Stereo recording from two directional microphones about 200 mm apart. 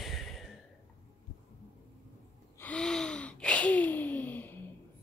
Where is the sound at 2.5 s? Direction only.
5° left (ahead or behind).